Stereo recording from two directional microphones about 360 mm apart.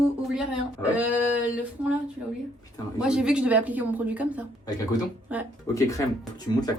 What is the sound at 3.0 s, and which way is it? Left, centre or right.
A woman's voice, centre.